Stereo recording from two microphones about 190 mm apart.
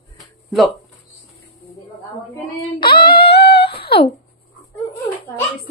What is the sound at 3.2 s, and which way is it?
Humming, 60° left (ahead or behind).